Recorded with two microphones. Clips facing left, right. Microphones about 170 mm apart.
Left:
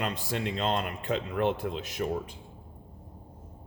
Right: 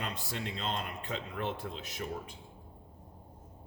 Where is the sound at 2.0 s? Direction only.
50° left (ahead or behind).